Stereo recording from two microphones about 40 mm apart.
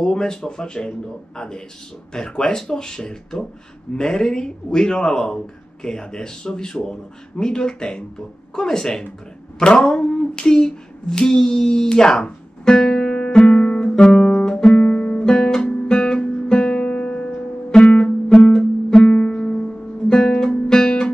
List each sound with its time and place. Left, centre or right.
0.0 s speech: centre
9.6 s a sound: left
14.7 s guitar: left
17.8 s music: left
18.4 s guitar: centre